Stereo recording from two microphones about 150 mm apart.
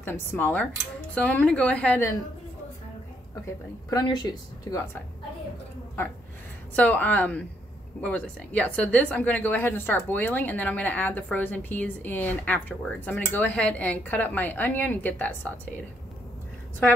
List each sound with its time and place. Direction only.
0.0 s a woman's voice: 15° left (ahead or behind)
3.9 s speech: 25° left (ahead or behind)
6.7 s a woman's voice: 10° left (ahead or behind)